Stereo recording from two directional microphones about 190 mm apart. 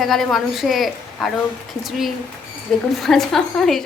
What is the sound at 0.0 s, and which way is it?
A woman's voice, centre (ahead or behind).